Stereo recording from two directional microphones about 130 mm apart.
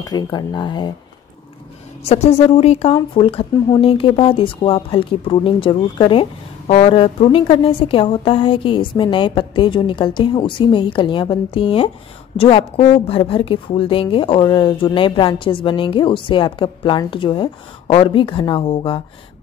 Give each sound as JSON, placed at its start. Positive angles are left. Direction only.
{"t": 0.0, "sound": "a woman's voice", "side_deg": 30}
{"t": 2.0, "sound": "a woman's voice", "side_deg": 55}
{"t": 6.7, "sound": "a woman's voice", "side_deg": 50}